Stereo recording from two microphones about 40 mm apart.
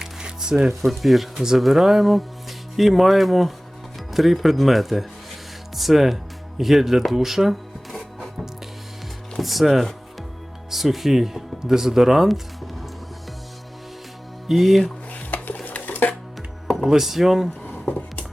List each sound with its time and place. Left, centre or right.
0.0 s music: centre
0.9 s speech: centre
7.9 s music: centre
9.4 s speech: centre
14.4 s speech: centre
15.1 s stir: left
15.6 s dishes: left
16.6 s music: centre
16.9 s speech: centre
17.6 s a sound: left